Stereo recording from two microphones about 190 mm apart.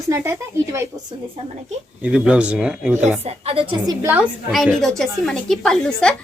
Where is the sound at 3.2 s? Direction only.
30° right (ahead or behind).